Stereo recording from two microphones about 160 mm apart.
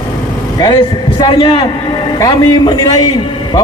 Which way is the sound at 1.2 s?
30° left (ahead or behind).